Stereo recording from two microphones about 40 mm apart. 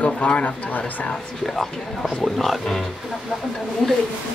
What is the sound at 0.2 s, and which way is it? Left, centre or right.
Speech, left.